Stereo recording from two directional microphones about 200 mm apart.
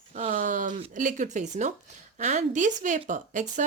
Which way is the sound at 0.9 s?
40° right (ahead or behind).